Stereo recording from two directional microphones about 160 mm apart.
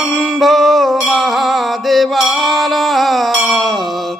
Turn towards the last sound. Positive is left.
turn(degrees=0)  # may be behind; listen again after turning